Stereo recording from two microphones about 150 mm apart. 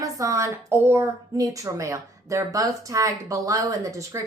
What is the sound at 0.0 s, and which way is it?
A woman's voice, 20° right (ahead or behind).